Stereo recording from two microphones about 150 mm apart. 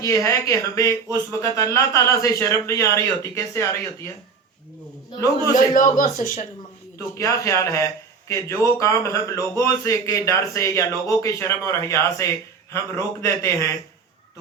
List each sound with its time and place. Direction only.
0.0 s a man's voice: 20° left (ahead or behind)
5.7 s speech: 60° left (ahead or behind)
7.2 s a man's voice: 20° left (ahead or behind)